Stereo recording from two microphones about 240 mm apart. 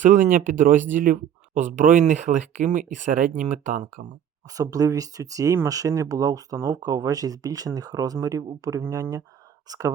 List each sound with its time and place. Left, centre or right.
0.0 s speech: right
4.5 s speech: centre